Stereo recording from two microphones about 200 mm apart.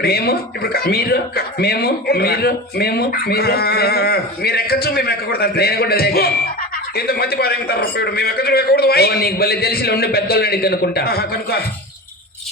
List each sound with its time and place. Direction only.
0.0 s speech: 50° left (ahead or behind)